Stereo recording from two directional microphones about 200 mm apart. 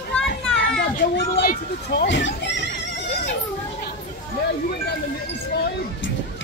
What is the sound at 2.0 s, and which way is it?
Speech, 60° left (ahead or behind).